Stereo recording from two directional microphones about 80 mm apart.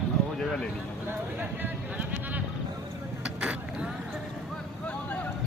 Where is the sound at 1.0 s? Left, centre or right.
Right.